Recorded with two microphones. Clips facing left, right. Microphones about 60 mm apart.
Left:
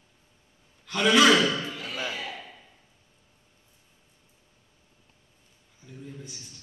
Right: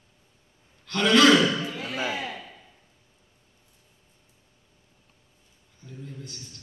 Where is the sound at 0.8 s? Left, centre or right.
Centre.